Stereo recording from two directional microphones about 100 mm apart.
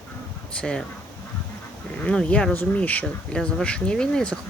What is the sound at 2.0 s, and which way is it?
Speech, 10° left (ahead or behind).